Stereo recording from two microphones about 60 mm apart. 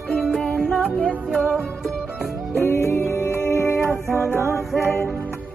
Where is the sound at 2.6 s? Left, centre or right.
Left.